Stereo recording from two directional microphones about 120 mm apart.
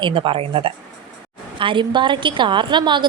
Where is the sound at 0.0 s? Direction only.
45° right (ahead or behind).